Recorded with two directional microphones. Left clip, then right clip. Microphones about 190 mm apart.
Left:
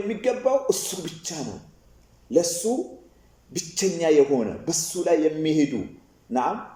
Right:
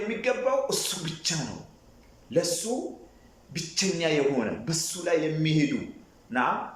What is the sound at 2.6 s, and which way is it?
Speech, 20° left (ahead or behind).